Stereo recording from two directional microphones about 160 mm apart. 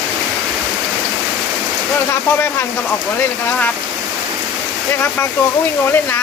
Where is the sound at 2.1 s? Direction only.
15° left (ahead or behind).